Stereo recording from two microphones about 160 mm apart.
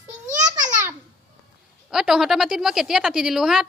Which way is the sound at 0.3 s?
50° right (ahead or behind).